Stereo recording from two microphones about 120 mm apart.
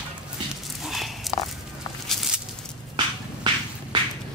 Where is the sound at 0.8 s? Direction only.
Centre (ahead or behind).